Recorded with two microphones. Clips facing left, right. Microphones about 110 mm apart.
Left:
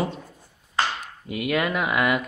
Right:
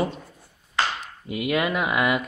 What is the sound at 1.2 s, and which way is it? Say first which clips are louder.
Speech: even; 5° right (ahead or behind).